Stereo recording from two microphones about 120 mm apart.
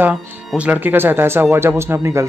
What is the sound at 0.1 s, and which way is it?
Speech, 10° right (ahead or behind).